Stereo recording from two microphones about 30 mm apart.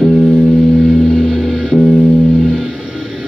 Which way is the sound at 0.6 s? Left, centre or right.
Centre.